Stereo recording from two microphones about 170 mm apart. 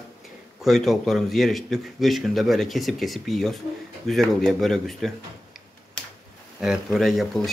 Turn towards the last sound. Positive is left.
turn(degrees=0)  # may be behind; listen again after turning